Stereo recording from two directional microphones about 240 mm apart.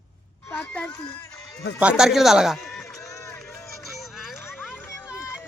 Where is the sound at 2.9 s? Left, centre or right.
Centre.